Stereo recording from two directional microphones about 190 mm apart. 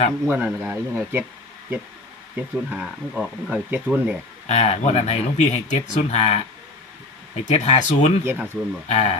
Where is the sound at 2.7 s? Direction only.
5° right (ahead or behind).